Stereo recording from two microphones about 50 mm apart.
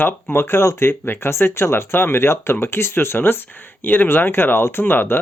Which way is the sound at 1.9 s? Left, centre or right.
Left.